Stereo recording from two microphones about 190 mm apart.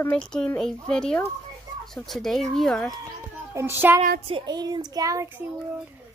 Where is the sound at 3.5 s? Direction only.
15° right (ahead or behind).